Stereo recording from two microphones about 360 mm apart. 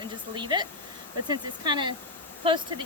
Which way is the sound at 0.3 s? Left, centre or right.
Centre.